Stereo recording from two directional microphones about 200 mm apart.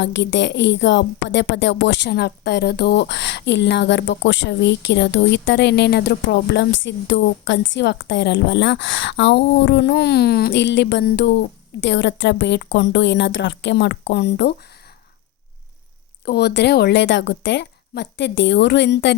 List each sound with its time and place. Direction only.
0.0 s a woman's voice: 60° left (ahead or behind)
16.2 s a woman's voice: 55° left (ahead or behind)